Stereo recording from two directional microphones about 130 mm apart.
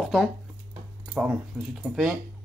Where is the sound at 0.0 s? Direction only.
Centre (ahead or behind).